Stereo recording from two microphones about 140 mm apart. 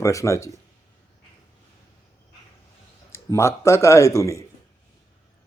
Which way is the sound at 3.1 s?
20° left (ahead or behind).